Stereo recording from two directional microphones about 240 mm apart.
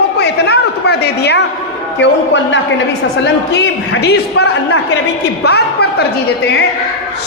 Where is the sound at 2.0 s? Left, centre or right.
Left.